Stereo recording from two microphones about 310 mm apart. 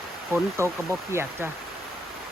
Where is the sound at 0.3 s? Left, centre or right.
Centre.